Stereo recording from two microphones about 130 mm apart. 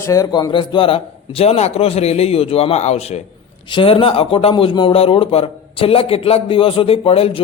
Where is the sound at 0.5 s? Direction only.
40° left (ahead or behind); by 3.2 s 55° left (ahead or behind).